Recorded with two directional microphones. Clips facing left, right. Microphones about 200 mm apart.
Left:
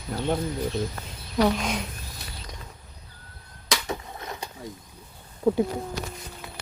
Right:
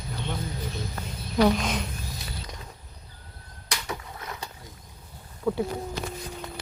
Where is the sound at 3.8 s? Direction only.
20° left (ahead or behind).